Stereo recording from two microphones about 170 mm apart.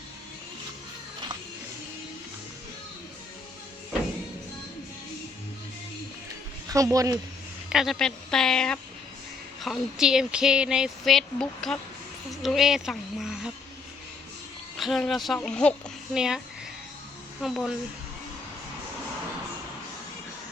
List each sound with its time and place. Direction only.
6.7 s speech: 20° right (ahead or behind)
7.7 s speech: centre (ahead or behind)
14.8 s speech: centre (ahead or behind)
17.4 s speech: centre (ahead or behind)